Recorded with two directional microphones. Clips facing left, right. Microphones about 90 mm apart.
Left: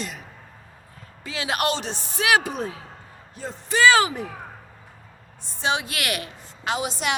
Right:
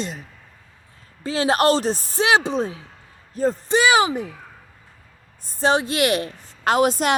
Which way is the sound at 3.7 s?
20° right (ahead or behind).